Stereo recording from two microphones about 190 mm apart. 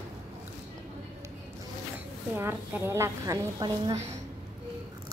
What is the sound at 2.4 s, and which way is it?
A woman's voice, 10° right (ahead or behind).